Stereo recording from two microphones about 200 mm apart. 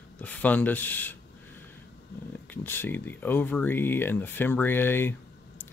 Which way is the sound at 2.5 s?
10° left (ahead or behind).